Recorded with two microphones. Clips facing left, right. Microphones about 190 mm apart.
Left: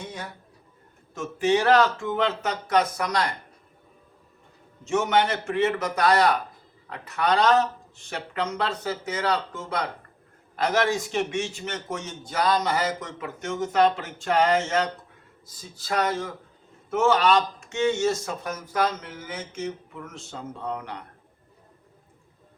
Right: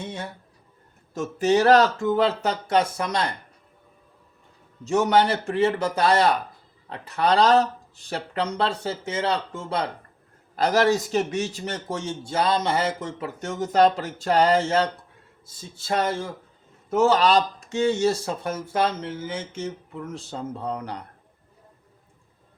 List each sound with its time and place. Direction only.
0.0 s a sound: 25° right (ahead or behind)
1.1 s a man's voice: 40° right (ahead or behind)
4.9 s a man's voice: 35° right (ahead or behind)